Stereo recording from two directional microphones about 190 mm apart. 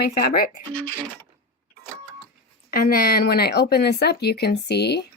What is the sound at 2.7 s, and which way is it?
Speech, 50° left (ahead or behind).